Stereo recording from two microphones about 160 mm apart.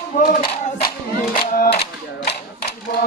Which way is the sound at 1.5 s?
80° left.